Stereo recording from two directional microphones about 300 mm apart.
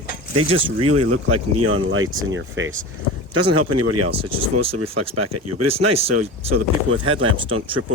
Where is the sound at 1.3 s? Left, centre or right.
Right.